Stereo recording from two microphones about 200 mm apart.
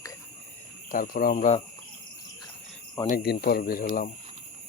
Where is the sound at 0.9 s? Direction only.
45° left (ahead or behind).